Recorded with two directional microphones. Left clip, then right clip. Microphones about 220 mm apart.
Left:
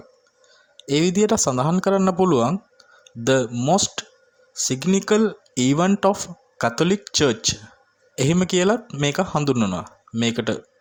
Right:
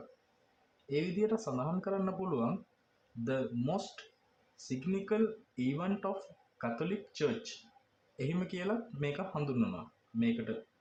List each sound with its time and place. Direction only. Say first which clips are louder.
0.9 s speech: left 14 dB; 50° left (ahead or behind)